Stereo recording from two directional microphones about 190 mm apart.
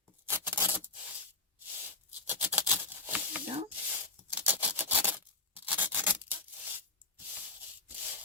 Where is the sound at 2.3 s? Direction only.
10° right (ahead or behind).